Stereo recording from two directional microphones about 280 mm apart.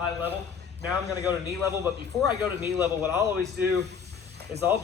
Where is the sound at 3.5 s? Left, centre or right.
Right.